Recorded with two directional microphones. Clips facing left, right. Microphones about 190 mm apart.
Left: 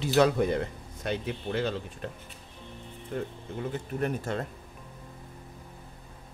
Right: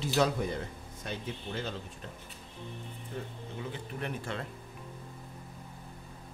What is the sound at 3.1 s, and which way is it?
Speech, 60° left (ahead or behind).